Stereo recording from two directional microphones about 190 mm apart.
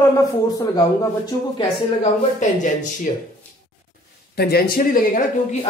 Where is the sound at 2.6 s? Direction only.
40° left (ahead or behind).